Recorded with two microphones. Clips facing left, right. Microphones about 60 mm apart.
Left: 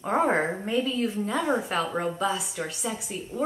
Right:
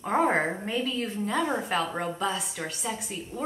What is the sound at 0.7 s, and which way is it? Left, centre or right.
Speech, left.